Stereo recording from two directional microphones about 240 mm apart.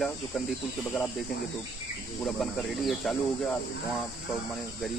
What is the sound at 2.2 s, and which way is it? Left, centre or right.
Speech, centre.